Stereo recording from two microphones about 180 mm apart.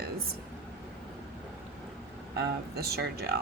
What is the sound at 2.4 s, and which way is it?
A woman's voice, 60° right (ahead or behind).